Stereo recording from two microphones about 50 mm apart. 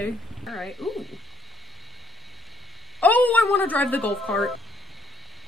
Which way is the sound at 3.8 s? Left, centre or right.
Left.